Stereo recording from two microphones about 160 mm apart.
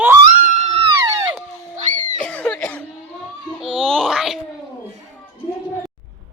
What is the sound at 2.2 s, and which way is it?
Cough, 10° left (ahead or behind).